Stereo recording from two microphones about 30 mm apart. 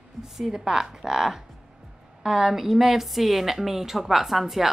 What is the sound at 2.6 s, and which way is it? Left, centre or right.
A woman's voice, centre.